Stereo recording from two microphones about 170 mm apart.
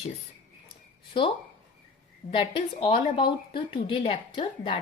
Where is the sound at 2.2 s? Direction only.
30° left (ahead or behind).